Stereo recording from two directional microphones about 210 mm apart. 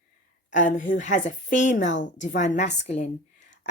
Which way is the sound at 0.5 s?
40° left (ahead or behind).